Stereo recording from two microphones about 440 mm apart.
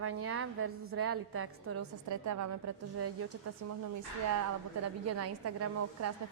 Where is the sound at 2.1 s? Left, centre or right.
Right.